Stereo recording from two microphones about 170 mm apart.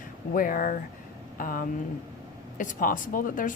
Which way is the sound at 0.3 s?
55° left (ahead or behind).